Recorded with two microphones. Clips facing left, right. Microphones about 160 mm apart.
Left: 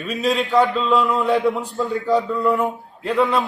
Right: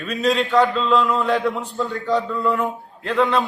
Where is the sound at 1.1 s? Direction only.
20° left (ahead or behind).